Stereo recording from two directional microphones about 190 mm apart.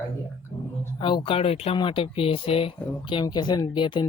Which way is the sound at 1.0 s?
25° left (ahead or behind).